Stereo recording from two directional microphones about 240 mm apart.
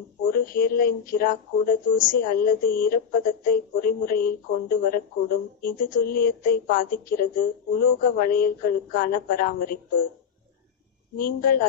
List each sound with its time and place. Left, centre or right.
0.2 s speech: left
11.1 s speech: left